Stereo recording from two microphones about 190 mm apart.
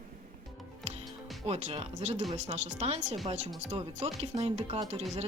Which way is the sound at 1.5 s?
30° right (ahead or behind).